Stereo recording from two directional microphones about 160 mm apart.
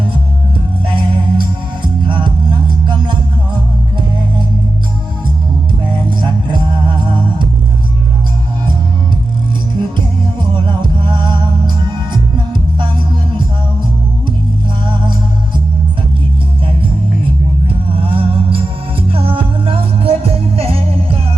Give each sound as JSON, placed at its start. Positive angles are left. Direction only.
{"t": 0.9, "sound": "music", "side_deg": -30}
{"t": 5.8, "sound": "music", "side_deg": -30}
{"t": 10.3, "sound": "music", "side_deg": -30}
{"t": 17.9, "sound": "music", "side_deg": -35}